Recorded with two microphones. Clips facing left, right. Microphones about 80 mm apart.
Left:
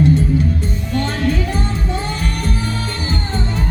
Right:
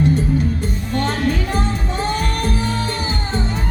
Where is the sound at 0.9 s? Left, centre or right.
Right.